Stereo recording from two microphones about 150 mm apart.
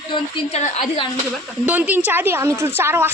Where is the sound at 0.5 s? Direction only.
45° left (ahead or behind).